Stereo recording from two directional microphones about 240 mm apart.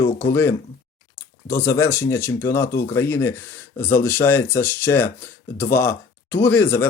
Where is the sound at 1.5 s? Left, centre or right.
Centre.